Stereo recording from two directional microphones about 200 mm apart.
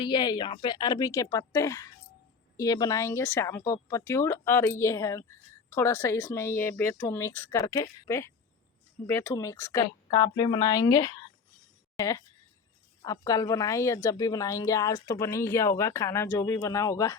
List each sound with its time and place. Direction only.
0.0 s speech: 20° left (ahead or behind)